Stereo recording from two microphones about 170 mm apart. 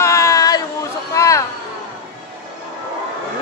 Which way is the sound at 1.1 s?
20° left (ahead or behind).